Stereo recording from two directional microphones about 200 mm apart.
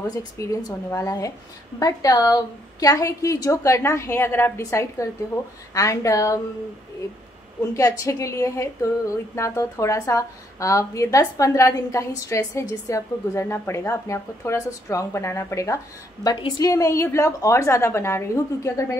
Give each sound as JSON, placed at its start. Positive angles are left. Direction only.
{"t": 0.1, "sound": "a woman's voice", "side_deg": 15}
{"t": 7.7, "sound": "a woman's voice", "side_deg": 15}